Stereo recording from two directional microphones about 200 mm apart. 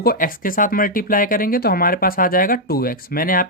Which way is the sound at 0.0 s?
45° left (ahead or behind).